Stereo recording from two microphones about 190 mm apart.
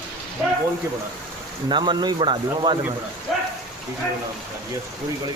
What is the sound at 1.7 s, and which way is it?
Speech, 25° right (ahead or behind).